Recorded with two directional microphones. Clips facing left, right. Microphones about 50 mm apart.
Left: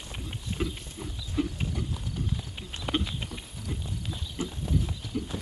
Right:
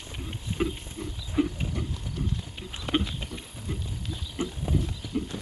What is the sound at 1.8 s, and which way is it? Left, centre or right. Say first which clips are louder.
Clip-clop: right 1 dB; centre.